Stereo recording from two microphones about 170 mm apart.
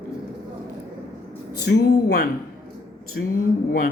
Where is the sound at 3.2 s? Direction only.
90° left.